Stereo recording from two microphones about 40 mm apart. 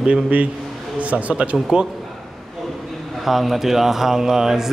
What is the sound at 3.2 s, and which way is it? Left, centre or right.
A man's voice, centre.